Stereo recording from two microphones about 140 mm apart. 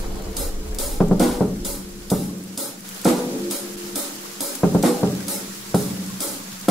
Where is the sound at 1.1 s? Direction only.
Centre (ahead or behind).